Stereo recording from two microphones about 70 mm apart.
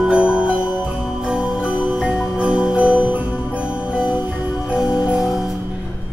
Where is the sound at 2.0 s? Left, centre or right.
Centre.